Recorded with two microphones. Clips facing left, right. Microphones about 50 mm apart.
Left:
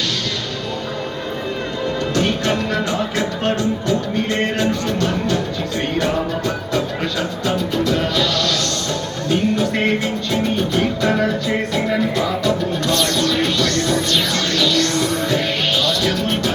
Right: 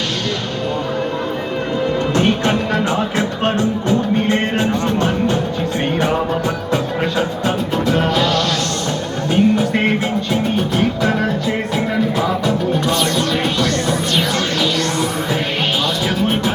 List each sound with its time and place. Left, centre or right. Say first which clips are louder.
2.1 s music: right 2 dB; right